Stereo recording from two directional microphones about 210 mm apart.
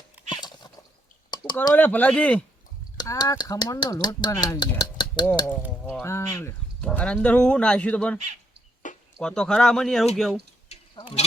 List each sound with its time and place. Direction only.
0.3 s horse: 20° left (ahead or behind)
1.3 s speech: 20° left (ahead or behind)
3.0 s speech: 20° left (ahead or behind)
5.6 s speech: 5° right (ahead or behind)
6.0 s speech: 10° left (ahead or behind)
10.7 s sheep: 30° left (ahead or behind)